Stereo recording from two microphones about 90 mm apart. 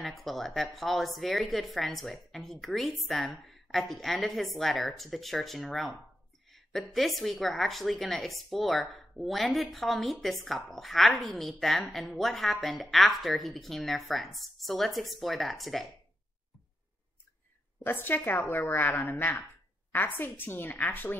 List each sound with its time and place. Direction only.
0.0 s a woman's voice: centre (ahead or behind)
17.8 s a woman's voice: 25° left (ahead or behind)